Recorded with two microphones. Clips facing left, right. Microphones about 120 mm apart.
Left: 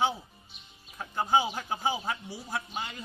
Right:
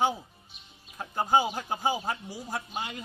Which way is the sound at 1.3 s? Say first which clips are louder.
Right 2 dB; 45° right (ahead or behind).